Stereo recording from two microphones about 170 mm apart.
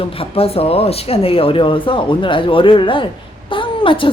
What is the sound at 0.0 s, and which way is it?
Speech, 35° left (ahead or behind).